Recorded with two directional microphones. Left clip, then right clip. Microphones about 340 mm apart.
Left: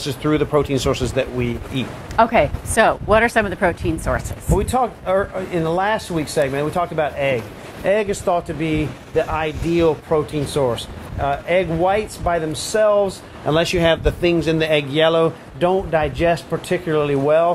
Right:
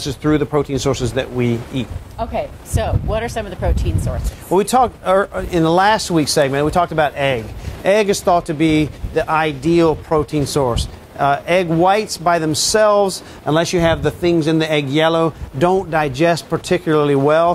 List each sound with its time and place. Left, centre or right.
0.0 s speech: centre
2.1 s speech: left
4.6 s speech: right
13.6 s speech: centre